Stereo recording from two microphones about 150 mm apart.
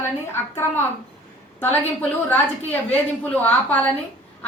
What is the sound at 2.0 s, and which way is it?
A woman's voice, 10° left (ahead or behind).